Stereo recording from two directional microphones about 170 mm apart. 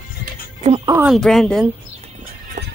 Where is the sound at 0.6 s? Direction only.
35° right (ahead or behind).